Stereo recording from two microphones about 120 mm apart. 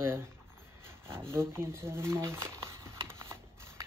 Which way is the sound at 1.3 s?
20° right (ahead or behind).